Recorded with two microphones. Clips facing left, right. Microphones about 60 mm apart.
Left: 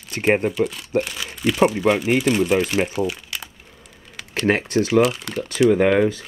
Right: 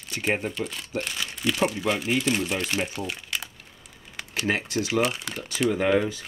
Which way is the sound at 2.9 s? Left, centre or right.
Centre.